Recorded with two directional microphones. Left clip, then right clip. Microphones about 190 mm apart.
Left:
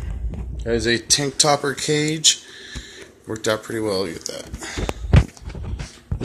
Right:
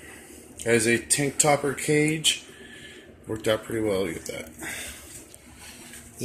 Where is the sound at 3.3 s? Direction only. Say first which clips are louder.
Left 3 dB; 15° left (ahead or behind).